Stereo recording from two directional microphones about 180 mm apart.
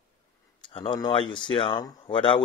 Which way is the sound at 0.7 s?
25° left (ahead or behind).